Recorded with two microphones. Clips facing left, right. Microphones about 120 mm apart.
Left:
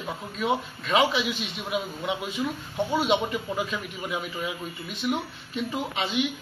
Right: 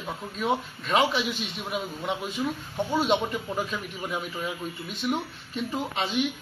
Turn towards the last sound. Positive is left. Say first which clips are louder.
# even
turn(degrees=5)  # may be behind; listen again after turning